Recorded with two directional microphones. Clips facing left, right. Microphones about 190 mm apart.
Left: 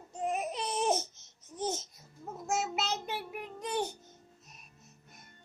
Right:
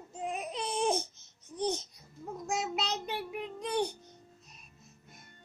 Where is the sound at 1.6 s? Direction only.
5° left (ahead or behind).